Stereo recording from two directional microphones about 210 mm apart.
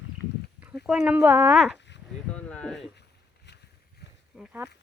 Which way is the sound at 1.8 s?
55° left (ahead or behind).